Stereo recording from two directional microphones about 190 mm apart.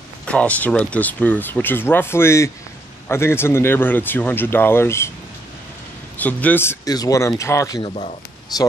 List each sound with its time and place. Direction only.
0.2 s speech: 5° left (ahead or behind)
6.1 s speech: 10° left (ahead or behind)